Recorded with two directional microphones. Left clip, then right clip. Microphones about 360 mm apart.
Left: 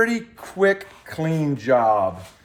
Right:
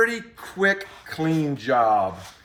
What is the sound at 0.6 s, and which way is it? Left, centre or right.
Speech, left.